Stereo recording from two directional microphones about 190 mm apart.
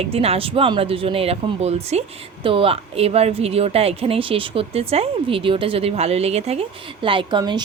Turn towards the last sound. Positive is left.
turn(degrees=-25)  # may be behind; listen again after turning